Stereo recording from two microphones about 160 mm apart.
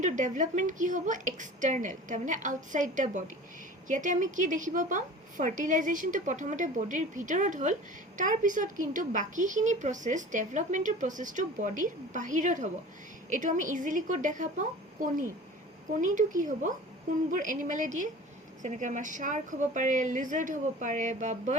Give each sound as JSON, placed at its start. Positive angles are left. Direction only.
{"t": 0.0, "sound": "a woman's voice", "side_deg": -50}